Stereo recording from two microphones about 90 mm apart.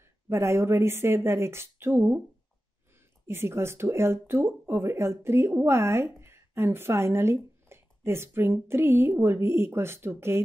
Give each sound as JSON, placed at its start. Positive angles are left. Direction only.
{"t": 0.0, "sound": "speech", "side_deg": -30}
{"t": 3.3, "sound": "a woman's voice", "side_deg": -30}